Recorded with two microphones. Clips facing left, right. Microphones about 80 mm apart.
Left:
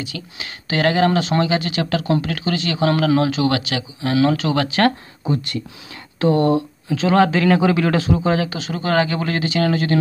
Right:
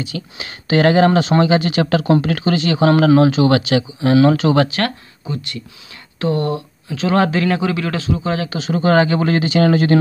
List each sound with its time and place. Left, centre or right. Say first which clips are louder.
0.4 s speech: right 5 dB; centre
4.7 s speech: left 4 dB; left
6.9 s speech: left 1 dB; centre
7.6 s speech: left 3 dB; centre
8.5 s speech: right 5 dB; centre